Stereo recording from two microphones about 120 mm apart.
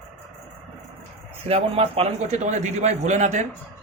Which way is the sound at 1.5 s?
55° right (ahead or behind).